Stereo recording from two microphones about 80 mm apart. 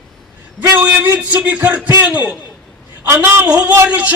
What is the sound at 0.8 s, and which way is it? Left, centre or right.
A man's voice, right.